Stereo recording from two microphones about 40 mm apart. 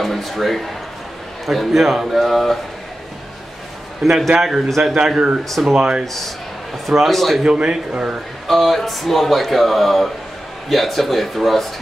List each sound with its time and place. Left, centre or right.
0.0 s speech: centre
4.0 s speech: centre
5.7 s speech: right
6.9 s speech: centre
7.4 s speech: right
8.5 s speech: centre